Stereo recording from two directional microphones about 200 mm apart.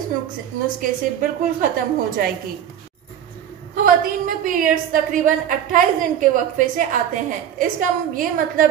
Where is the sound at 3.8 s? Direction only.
45° right (ahead or behind).